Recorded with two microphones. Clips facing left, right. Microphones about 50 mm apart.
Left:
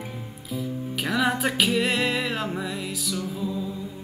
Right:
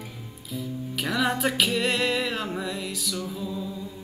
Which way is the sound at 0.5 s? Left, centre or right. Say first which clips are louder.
Left 2 dB; centre.